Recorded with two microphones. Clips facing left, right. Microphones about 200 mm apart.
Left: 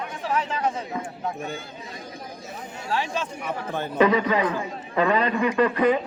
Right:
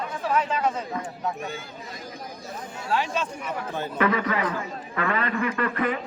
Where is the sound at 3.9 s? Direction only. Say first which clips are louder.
Left 5 dB; 20° left (ahead or behind).